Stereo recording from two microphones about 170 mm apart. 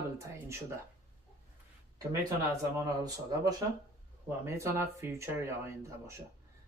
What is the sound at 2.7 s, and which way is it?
Speech, 20° right (ahead or behind).